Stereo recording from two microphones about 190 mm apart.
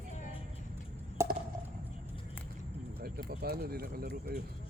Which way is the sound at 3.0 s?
55° right (ahead or behind).